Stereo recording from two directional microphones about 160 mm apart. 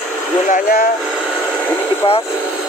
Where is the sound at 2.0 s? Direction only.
35° left (ahead or behind).